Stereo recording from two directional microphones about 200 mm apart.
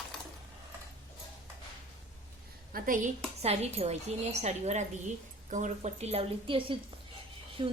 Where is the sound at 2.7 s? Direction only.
40° right (ahead or behind).